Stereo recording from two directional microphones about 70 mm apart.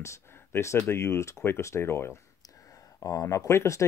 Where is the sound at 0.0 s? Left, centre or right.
Left.